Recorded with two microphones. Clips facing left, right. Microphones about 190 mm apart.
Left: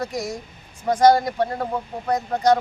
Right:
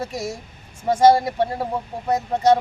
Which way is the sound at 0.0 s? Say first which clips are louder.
Left 1 dB; 25° right (ahead or behind).